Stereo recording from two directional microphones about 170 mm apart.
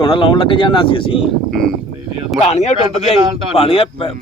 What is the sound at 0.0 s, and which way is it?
Speech, 30° left (ahead or behind).